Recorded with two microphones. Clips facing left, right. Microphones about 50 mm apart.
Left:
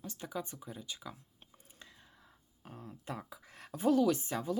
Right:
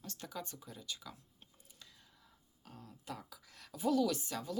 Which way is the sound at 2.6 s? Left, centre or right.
Left.